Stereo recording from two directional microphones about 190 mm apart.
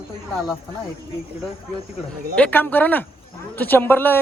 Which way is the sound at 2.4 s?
10° left (ahead or behind).